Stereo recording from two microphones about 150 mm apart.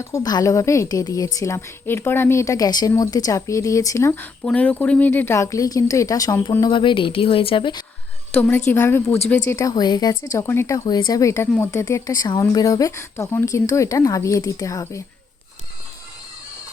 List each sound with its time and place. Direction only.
0.0 s speech: 20° left (ahead or behind)
6.7 s speech: 35° left (ahead or behind)
8.3 s a woman's voice: 10° left (ahead or behind)